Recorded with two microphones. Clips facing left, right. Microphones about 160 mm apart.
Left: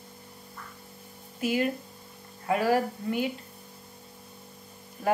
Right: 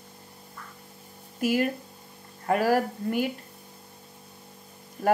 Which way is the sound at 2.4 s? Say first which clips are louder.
Right 2 dB; 45° right (ahead or behind).